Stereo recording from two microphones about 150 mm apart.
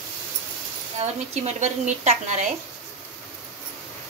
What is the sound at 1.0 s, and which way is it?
A woman's voice, 50° right (ahead or behind).